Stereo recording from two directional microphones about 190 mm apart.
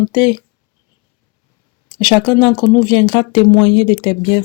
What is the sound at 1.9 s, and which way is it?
Speech, 25° left (ahead or behind).